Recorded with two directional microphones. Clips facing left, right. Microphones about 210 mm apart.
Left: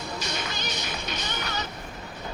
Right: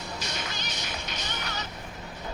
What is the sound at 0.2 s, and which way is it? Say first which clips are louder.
Music: left 3 dB; 65° left (ahead or behind).